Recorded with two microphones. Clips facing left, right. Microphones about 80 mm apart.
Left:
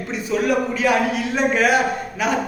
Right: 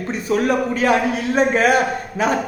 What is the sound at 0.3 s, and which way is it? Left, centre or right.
Speech, right.